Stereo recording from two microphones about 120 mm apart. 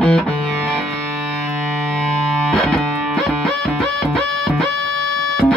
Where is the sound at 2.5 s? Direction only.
5° left (ahead or behind).